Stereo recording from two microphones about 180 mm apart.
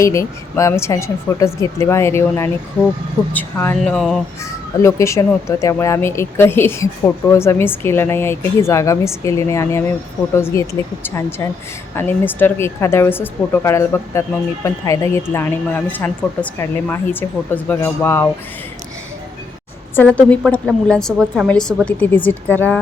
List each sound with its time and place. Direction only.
0.0 s speech: 15° left (ahead or behind)
3.9 s speech: centre (ahead or behind)
4.8 s speech: 15° left (ahead or behind)
20.0 s speech: 5° left (ahead or behind)